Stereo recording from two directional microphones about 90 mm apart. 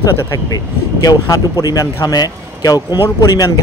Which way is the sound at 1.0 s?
45° left (ahead or behind).